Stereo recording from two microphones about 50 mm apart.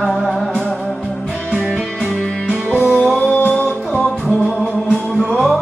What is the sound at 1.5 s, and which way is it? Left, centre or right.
Music, centre.